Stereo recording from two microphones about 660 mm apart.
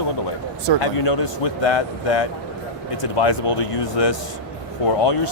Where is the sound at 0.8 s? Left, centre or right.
Left.